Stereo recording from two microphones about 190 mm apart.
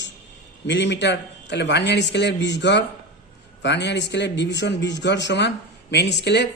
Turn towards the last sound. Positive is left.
turn(degrees=60)  # may be behind; listen again after turning